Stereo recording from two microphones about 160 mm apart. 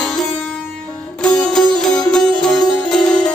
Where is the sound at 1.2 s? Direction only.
5° left (ahead or behind).